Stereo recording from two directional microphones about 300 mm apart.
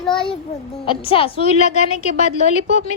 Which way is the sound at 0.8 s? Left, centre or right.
Centre.